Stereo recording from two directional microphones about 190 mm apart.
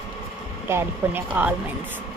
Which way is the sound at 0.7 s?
10° right (ahead or behind).